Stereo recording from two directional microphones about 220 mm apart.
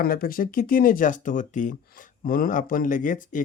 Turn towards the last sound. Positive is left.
turn(degrees=35)  # may be behind; listen again after turning